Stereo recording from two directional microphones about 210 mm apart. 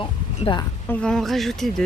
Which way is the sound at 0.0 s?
25° left (ahead or behind).